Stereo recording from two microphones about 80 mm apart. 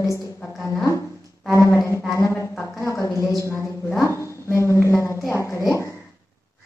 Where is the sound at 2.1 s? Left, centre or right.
Left.